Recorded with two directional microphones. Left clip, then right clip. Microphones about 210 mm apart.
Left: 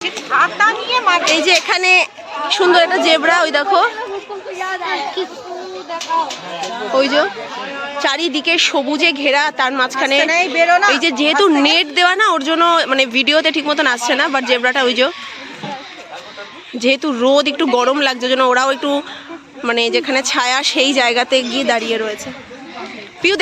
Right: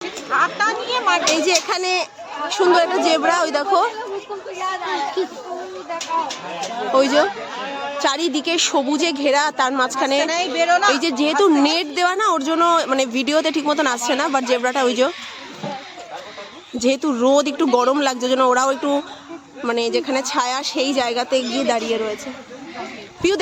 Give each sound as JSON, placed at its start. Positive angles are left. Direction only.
{"t": 0.3, "sound": "speech", "side_deg": -15}
{"t": 1.2, "sound": "a woman's voice", "side_deg": 0}
{"t": 6.9, "sound": "a woman's voice", "side_deg": -5}
{"t": 10.2, "sound": "a woman's voice", "side_deg": 40}
{"t": 10.9, "sound": "a woman's voice", "side_deg": 0}
{"t": 16.7, "sound": "a woman's voice", "side_deg": -5}
{"t": 18.1, "sound": "a woman's voice", "side_deg": -15}
{"t": 21.8, "sound": "a woman's voice", "side_deg": 0}